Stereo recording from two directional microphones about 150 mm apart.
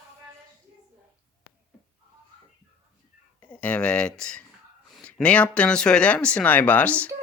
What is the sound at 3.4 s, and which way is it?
Speech, 10° left (ahead or behind).